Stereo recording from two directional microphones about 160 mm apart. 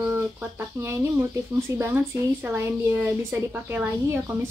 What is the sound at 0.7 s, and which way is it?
A woman's voice, 15° right (ahead or behind).